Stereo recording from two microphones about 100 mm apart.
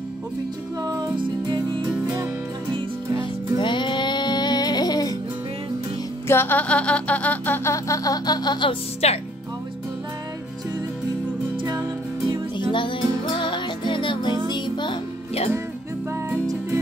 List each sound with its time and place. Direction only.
0.8 s music: 40° right (ahead or behind)
1.2 s music: 55° right (ahead or behind)
3.5 s music: 50° left (ahead or behind)
6.2 s music: 20° left (ahead or behind)
7.7 s music: 35° left (ahead or behind)
9.0 s speech: 90° left
12.5 s music: 55° left (ahead or behind)